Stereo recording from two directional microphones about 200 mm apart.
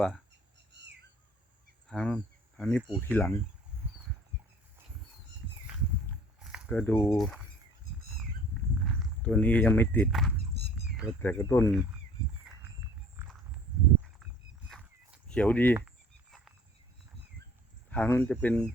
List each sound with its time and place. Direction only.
0.7 s bird: 60° right (ahead or behind)
1.9 s speech: 5° left (ahead or behind)
6.4 s a sound: 5° right (ahead or behind)
6.7 s speech: 10° left (ahead or behind)
8.8 s speech: centre (ahead or behind)
10.8 s a sound: 5° right (ahead or behind)
11.2 s speech: 10° left (ahead or behind)
14.7 s a sound: centre (ahead or behind)
15.4 s speech: 10° left (ahead or behind)
17.9 s speech: 10° left (ahead or behind)